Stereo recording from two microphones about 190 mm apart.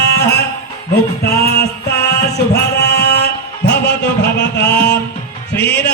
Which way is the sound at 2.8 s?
60° left (ahead or behind).